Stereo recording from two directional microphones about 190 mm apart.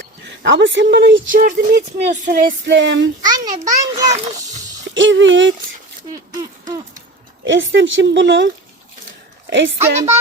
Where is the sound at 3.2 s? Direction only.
20° right (ahead or behind).